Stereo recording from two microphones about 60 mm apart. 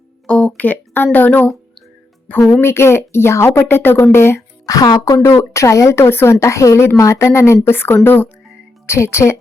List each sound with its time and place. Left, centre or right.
0.3 s speech: left
2.6 s speech: left
3.6 s speech: left
4.6 s speech: left
5.2 s speech: left
8.9 s speech: left